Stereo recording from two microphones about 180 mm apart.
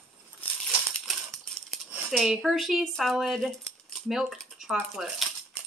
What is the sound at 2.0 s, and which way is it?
Speech, centre (ahead or behind).